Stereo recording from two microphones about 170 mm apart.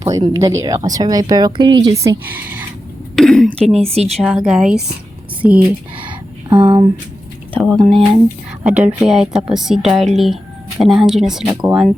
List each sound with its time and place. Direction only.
0.0 s speech: 20° right (ahead or behind)
3.2 s a sound: centre (ahead or behind)
3.9 s a woman's voice: 40° right (ahead or behind)
4.2 s speech: 5° right (ahead or behind)
6.5 s speech: 25° right (ahead or behind)
7.6 s speech: centre (ahead or behind)